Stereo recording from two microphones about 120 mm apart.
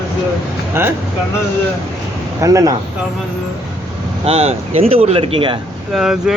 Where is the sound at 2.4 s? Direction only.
25° right (ahead or behind).